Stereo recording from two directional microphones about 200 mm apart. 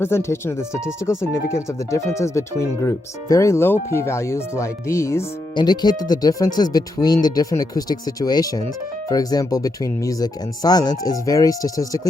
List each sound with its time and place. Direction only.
0.0 s speech: 15° left (ahead or behind)